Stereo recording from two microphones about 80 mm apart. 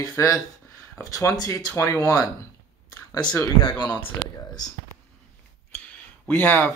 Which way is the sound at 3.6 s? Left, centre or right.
Left.